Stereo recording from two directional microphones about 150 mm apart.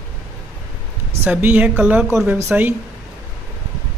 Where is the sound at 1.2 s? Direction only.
10° right (ahead or behind).